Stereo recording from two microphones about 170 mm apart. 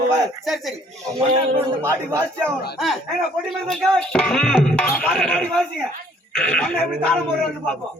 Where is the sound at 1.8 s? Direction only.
15° right (ahead or behind).